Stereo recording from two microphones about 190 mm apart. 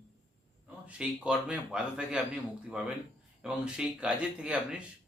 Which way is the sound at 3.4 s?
5° right (ahead or behind).